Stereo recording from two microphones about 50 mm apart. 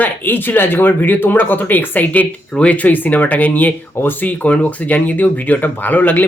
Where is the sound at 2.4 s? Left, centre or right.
Left.